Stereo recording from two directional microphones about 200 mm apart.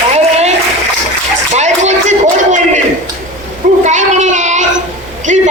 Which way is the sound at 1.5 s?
35° right (ahead or behind).